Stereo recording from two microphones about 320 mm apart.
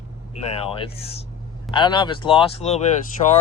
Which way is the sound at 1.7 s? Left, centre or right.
Centre.